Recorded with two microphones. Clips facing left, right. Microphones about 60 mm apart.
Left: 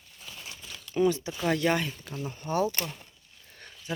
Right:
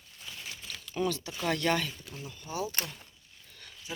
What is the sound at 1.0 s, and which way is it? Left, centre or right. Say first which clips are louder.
Speech: left 5 dB; left.